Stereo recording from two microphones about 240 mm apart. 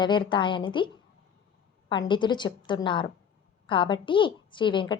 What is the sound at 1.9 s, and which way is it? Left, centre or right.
Speech, centre.